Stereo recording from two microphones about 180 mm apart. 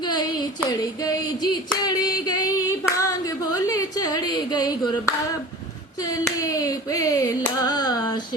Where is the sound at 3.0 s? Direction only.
20° left (ahead or behind).